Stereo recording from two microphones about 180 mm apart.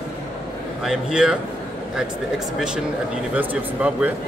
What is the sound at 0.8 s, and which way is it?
Speech, 5° right (ahead or behind).